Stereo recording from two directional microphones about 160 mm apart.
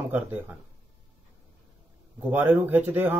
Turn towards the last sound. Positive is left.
turn(degrees=-10)  # may be behind; listen again after turning